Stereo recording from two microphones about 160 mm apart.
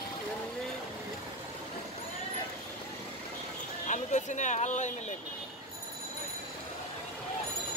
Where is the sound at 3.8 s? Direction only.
50° left (ahead or behind).